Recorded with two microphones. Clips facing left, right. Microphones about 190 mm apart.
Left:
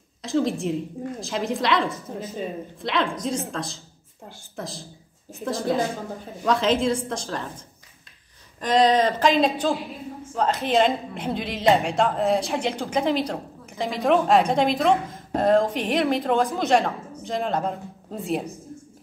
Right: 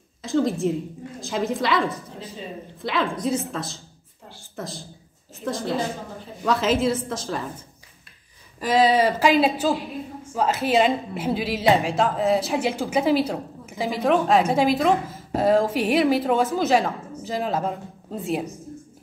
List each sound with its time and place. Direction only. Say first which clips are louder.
0.2 s a woman's voice: right 2 dB; centre (ahead or behind)
2.1 s speech: left 5 dB; 50° left (ahead or behind)
2.8 s a woman's voice: right 1 dB; centre (ahead or behind)